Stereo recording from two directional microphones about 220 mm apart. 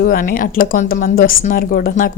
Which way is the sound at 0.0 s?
40° left (ahead or behind).